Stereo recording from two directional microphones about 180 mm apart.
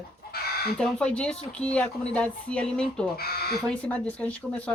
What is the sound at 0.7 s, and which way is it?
Speech, 5° left (ahead or behind).